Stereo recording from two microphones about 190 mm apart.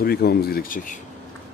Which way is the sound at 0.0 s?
55° left (ahead or behind).